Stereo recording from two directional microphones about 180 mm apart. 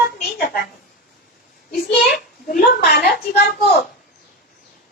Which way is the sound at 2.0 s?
55° left (ahead or behind).